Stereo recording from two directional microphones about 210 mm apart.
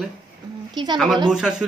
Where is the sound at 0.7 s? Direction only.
20° right (ahead or behind).